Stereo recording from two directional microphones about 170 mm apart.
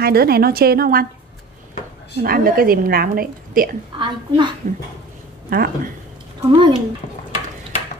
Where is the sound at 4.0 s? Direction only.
25° right (ahead or behind).